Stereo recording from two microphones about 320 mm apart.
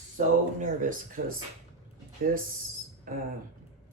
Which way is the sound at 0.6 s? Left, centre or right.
Right.